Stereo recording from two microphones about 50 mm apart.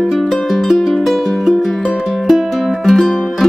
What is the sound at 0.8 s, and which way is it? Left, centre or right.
Music, centre.